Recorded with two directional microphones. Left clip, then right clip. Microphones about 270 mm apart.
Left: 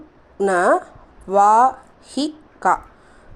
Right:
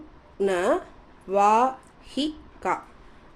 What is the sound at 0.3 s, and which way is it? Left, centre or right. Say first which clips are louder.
A woman's voice: left 7 dB; centre.